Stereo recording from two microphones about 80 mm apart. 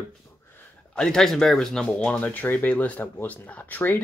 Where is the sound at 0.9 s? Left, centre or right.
Centre.